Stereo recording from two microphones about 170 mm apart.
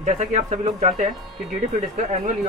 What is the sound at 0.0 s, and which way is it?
Speech, 40° right (ahead or behind).